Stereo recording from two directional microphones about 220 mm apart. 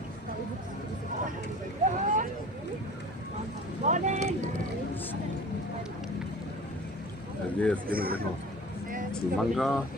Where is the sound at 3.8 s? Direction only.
35° right (ahead or behind).